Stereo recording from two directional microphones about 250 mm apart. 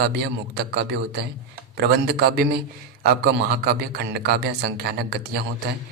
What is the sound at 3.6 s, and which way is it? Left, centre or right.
A man's voice, right.